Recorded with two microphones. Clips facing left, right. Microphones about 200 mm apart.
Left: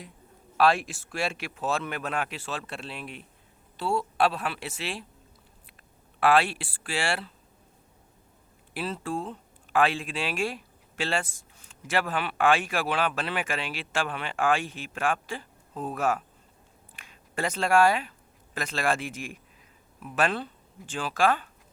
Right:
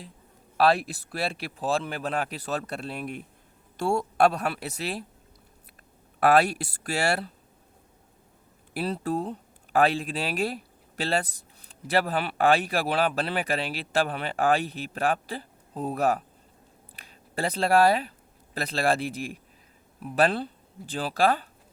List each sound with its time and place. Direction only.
0.5 s speech: 35° right (ahead or behind)
6.1 s speech: 40° right (ahead or behind)
8.7 s speech: 40° right (ahead or behind)